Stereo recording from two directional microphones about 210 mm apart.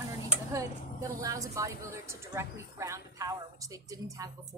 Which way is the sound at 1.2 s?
15° right (ahead or behind).